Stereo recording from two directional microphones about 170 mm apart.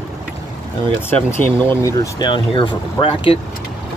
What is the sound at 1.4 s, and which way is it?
Speech, 10° left (ahead or behind).